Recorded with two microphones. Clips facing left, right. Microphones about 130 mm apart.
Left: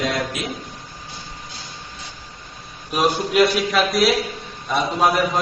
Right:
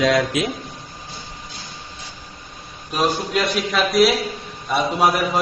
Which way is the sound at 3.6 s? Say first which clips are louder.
Right 2 dB; centre (ahead or behind).